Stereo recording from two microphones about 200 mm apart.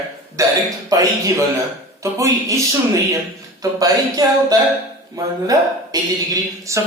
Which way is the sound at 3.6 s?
20° right (ahead or behind).